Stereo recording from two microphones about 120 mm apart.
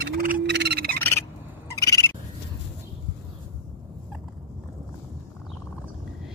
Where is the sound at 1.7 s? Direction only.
25° left (ahead or behind).